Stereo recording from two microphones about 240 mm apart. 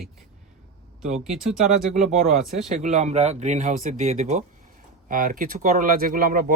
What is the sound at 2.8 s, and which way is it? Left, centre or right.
Speech, right.